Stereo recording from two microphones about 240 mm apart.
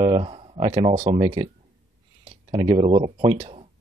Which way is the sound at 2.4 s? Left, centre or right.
Right.